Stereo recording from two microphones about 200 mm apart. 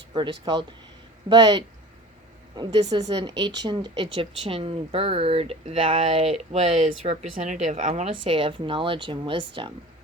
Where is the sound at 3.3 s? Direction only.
60° right (ahead or behind).